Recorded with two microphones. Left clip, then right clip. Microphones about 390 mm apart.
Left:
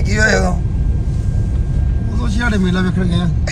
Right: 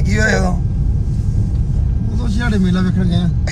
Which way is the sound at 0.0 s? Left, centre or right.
Centre.